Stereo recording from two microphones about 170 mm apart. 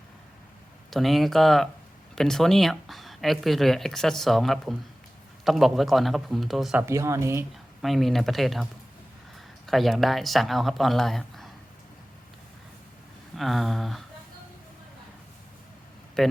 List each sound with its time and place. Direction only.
0.9 s speech: centre (ahead or behind)
6.8 s speech: 15° right (ahead or behind)
7.8 s speech: centre (ahead or behind)
9.6 s speech: centre (ahead or behind)
13.3 s speech: centre (ahead or behind)
16.2 s speech: 5° left (ahead or behind)